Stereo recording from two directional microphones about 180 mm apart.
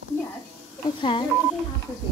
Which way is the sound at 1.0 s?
25° left (ahead or behind).